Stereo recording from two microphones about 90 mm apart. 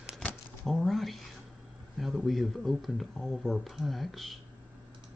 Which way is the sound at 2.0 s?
Centre (ahead or behind).